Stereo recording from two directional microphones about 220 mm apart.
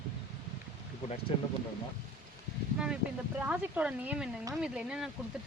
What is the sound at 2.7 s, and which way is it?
Speech, 5° right (ahead or behind).